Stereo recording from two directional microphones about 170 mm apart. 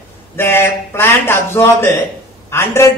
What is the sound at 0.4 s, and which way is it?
A man's voice, 15° left (ahead or behind).